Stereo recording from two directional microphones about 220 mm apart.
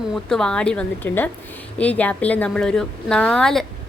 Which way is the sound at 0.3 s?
5° left (ahead or behind).